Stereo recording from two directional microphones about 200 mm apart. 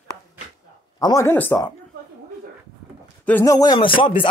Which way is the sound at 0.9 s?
15° left (ahead or behind).